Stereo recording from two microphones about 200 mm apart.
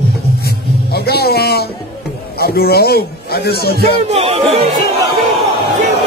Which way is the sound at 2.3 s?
50° left (ahead or behind).